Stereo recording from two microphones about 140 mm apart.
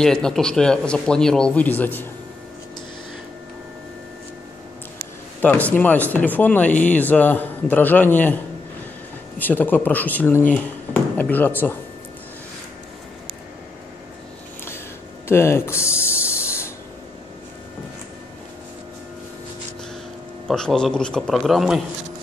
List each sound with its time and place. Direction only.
0.0 s speech: 5° left (ahead or behind)
5.4 s a man's voice: 10° left (ahead or behind)
9.4 s a man's voice: 15° left (ahead or behind)
15.2 s a sound: 20° left (ahead or behind)
20.4 s speech: 5° left (ahead or behind)